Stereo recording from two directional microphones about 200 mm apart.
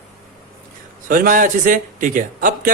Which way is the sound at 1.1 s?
45° right (ahead or behind).